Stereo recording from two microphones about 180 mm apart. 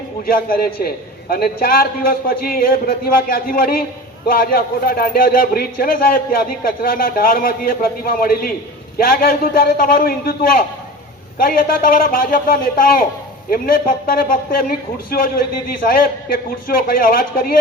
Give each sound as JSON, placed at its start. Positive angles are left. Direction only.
{"t": 0.3, "sound": "a man's voice", "side_deg": 55}